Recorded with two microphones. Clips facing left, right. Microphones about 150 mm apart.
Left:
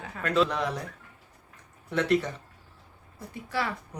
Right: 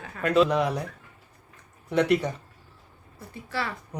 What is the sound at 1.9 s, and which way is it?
Speech, 15° right (ahead or behind).